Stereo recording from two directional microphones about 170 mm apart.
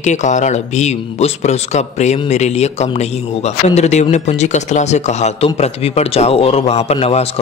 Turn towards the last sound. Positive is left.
turn(degrees=35)  # may be behind; listen again after turning